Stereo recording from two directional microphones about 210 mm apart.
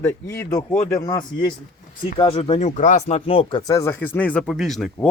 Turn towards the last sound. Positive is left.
turn(degrees=0)  # may be behind; listen again after turning